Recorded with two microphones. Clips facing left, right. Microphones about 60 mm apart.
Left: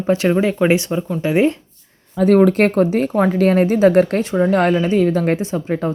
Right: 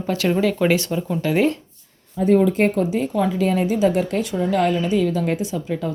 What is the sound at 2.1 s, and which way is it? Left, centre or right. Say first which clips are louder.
A woman's voice: left 4 dB; left.